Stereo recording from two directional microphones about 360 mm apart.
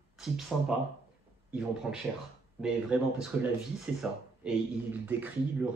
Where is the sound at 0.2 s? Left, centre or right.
Centre.